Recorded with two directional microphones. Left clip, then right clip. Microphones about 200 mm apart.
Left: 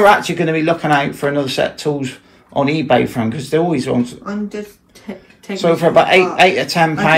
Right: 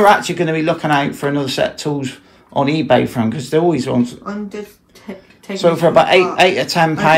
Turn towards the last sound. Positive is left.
turn(degrees=-20)  # may be behind; listen again after turning